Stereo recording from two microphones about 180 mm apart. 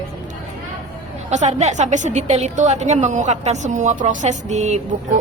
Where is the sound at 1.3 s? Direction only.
40° right (ahead or behind).